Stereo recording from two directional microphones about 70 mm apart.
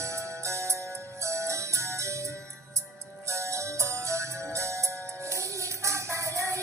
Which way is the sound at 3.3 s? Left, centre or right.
Right.